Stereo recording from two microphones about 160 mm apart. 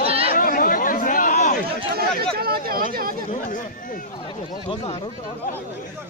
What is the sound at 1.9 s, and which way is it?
Speech, 75° right (ahead or behind).